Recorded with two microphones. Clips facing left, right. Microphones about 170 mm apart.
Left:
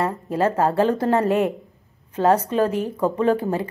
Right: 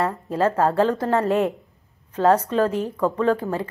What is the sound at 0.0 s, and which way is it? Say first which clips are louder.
Speech: even; 15° left (ahead or behind).